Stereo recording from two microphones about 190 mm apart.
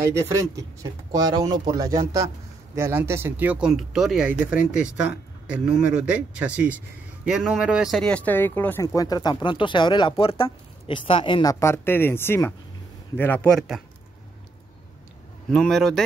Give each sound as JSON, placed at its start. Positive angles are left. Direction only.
{"t": 0.1, "sound": "speech", "side_deg": -15}
{"t": 11.6, "sound": "speech", "side_deg": 10}
{"t": 15.5, "sound": "speech", "side_deg": 0}